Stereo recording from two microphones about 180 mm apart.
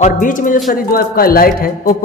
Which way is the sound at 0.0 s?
45° left (ahead or behind).